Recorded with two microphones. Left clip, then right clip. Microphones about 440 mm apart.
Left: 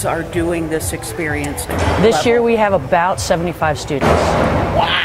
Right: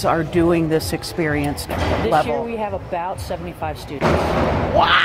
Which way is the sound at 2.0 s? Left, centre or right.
Left.